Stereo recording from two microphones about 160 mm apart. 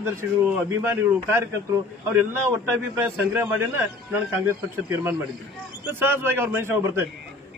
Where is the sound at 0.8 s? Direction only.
15° right (ahead or behind).